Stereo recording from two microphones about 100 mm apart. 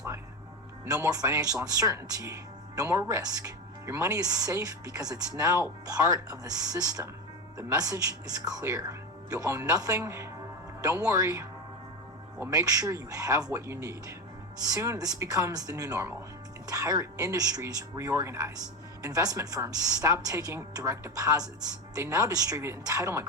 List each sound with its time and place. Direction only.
0.9 s speech: 35° right (ahead or behind)
12.5 s speech: 35° right (ahead or behind)
17.9 s speech: 30° right (ahead or behind)